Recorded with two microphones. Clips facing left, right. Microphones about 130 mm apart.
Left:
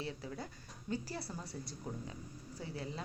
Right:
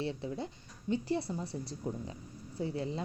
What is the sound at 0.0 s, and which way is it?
A woman's voice, 30° right (ahead or behind).